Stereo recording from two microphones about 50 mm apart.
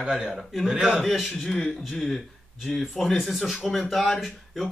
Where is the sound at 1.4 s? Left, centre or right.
Centre.